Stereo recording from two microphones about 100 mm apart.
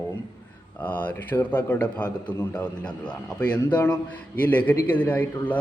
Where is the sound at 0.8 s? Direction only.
15° left (ahead or behind).